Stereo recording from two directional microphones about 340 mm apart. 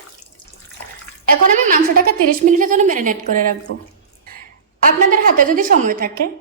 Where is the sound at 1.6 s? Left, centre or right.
Right.